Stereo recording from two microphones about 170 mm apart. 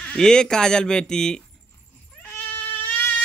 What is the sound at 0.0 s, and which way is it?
Speech, 5° left (ahead or behind).